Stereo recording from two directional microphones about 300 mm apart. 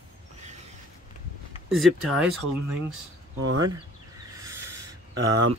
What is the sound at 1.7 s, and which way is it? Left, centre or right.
Speech, centre.